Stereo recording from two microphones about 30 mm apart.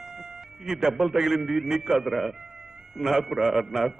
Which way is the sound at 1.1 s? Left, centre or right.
Centre.